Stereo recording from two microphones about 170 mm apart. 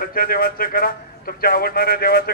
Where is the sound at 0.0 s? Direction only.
60° left (ahead or behind).